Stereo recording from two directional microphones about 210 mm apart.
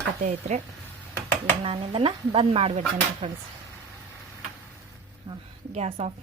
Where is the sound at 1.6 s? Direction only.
25° right (ahead or behind).